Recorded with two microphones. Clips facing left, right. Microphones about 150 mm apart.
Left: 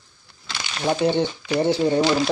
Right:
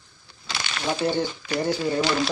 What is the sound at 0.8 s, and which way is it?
Speech, 25° left (ahead or behind).